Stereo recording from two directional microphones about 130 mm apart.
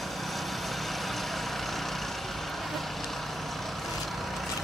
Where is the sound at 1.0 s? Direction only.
Centre (ahead or behind).